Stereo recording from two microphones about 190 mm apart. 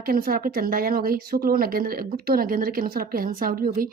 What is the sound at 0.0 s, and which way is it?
Speech, 50° right (ahead or behind).